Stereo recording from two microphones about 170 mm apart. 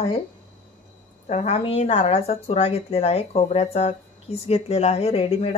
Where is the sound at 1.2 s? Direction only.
40° left (ahead or behind).